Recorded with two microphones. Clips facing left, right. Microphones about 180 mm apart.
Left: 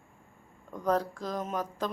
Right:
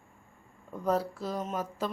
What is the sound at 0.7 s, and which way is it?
A woman's voice, 5° right (ahead or behind).